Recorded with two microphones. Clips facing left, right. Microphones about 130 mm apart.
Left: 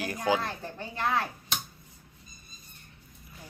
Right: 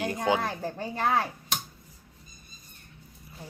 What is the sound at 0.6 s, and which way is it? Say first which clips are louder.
Speech: right 4 dB; 40° right (ahead or behind).